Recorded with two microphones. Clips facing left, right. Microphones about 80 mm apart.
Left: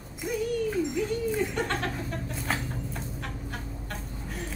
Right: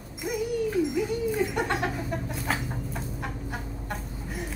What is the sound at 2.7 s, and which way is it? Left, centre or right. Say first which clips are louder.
Chicken: right 2 dB; centre.